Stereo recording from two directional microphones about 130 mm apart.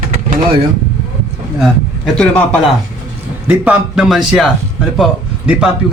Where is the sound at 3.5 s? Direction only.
10° right (ahead or behind).